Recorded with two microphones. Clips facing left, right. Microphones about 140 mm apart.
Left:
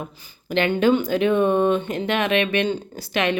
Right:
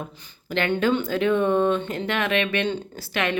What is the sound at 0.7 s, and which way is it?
Speech, 15° left (ahead or behind).